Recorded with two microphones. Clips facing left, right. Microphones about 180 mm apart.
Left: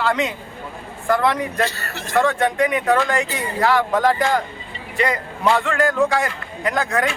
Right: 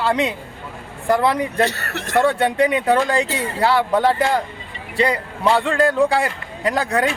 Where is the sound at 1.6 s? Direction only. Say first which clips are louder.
Right 4 dB; 65° right (ahead or behind).